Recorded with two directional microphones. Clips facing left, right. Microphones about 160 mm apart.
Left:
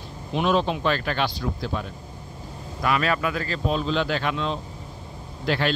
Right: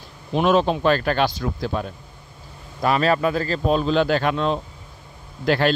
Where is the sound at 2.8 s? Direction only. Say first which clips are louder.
Right 5 dB; 35° right (ahead or behind).